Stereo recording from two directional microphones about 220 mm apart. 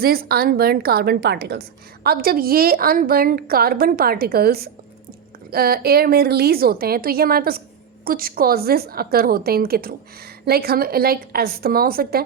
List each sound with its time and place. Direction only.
0.0 s a woman's voice: 45° right (ahead or behind)